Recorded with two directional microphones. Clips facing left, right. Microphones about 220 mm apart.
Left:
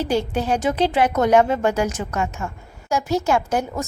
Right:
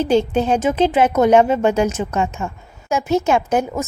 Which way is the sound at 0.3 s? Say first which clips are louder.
Right 4 dB; 25° right (ahead or behind).